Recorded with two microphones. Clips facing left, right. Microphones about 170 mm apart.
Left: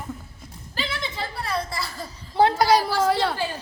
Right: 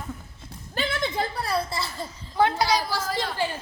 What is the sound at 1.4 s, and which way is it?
Speech, 30° right (ahead or behind).